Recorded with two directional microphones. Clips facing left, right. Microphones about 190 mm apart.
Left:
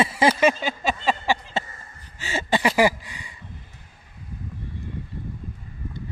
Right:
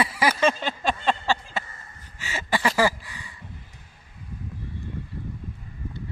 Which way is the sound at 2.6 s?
15° left (ahead or behind).